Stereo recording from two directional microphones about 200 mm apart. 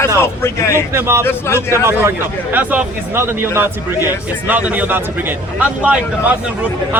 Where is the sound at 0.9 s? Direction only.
10° right (ahead or behind).